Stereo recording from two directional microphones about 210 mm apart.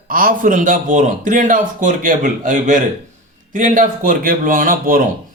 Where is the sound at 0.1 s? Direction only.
40° right (ahead or behind).